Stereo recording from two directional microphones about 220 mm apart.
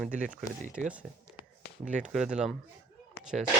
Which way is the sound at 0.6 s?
35° right (ahead or behind).